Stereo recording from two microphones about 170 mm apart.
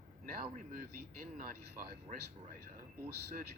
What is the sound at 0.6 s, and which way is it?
Speech, 55° right (ahead or behind).